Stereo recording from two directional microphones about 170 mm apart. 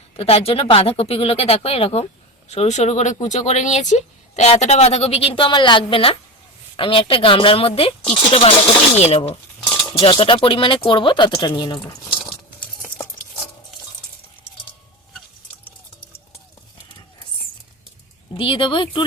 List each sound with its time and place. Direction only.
0.2 s speech: 35° left (ahead or behind)
12.2 s a sound: 5° left (ahead or behind)
18.3 s speech: 30° left (ahead or behind)